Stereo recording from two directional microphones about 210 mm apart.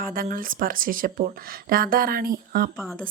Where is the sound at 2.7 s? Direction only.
Centre (ahead or behind).